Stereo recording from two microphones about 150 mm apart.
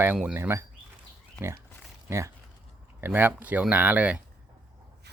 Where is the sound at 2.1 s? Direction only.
20° right (ahead or behind).